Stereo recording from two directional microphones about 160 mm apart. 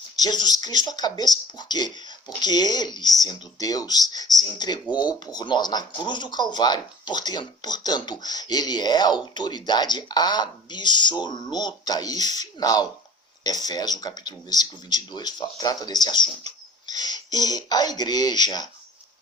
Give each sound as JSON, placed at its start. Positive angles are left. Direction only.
{"t": 0.2, "sound": "speech", "side_deg": 25}